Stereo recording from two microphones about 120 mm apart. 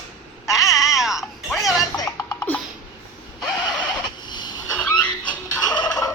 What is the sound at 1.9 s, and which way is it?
Music, 30° left (ahead or behind).